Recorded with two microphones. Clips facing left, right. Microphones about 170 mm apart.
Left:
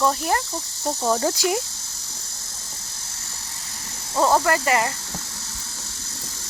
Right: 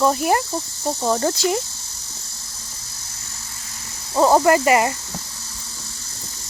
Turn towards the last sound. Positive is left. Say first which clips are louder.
# right 6 dB
turn(degrees=-15)  # may be behind; listen again after turning